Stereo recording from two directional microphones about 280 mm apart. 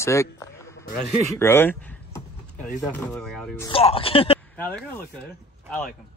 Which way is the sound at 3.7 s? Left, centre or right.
Centre.